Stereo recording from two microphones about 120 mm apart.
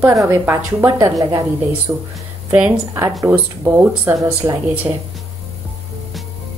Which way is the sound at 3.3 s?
20° right (ahead or behind).